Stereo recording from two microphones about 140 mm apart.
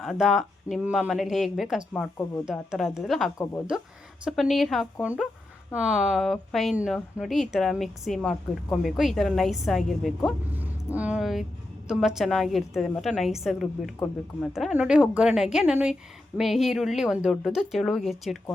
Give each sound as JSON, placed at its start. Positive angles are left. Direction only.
{"t": 0.0, "sound": "a woman's voice", "side_deg": 0}
{"t": 1.9, "sound": "speech", "side_deg": 10}
{"t": 2.4, "sound": "a woman's voice", "side_deg": -5}
{"t": 3.3, "sound": "a woman's voice", "side_deg": 20}
{"t": 4.3, "sound": "a woman's voice", "side_deg": 0}